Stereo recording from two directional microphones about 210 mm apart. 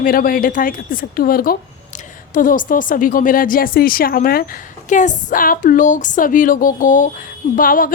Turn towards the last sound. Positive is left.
turn(degrees=40)  # may be behind; listen again after turning